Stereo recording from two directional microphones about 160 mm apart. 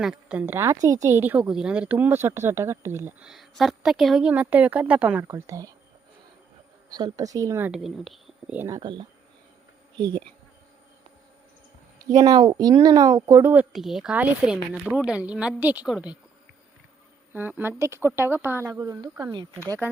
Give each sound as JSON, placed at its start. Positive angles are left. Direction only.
{"t": 0.0, "sound": "a woman's voice", "side_deg": -5}
{"t": 6.9, "sound": "speech", "side_deg": -25}
{"t": 7.7, "sound": "speech", "side_deg": 0}
{"t": 8.5, "sound": "speech", "side_deg": -20}
{"t": 12.0, "sound": "a woman's voice", "side_deg": -25}
{"t": 17.3, "sound": "a woman's voice", "side_deg": -10}